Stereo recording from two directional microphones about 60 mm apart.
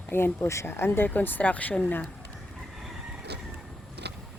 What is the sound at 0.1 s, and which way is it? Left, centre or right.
Speech, left.